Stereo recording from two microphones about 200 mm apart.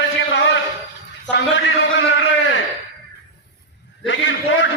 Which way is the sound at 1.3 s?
65° left (ahead or behind).